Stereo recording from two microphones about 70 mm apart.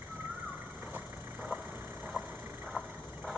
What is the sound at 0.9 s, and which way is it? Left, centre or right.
Vehicle, right.